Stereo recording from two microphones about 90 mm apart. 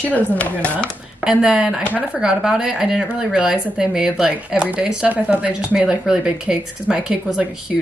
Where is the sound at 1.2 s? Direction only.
10° right (ahead or behind).